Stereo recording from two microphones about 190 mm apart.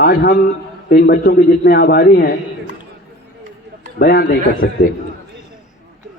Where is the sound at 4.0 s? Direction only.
50° left (ahead or behind).